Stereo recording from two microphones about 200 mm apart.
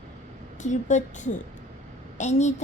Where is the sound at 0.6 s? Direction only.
35° left (ahead or behind).